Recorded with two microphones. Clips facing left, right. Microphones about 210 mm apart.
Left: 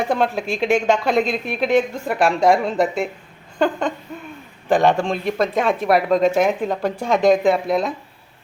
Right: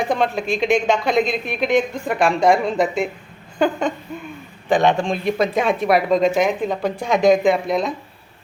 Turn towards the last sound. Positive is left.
turn(degrees=5)  # may be behind; listen again after turning